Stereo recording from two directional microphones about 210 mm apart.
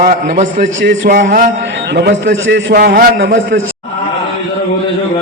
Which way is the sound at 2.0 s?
55° right (ahead or behind).